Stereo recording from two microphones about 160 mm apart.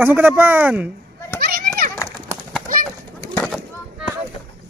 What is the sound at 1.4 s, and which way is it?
Children playing, 70° right (ahead or behind).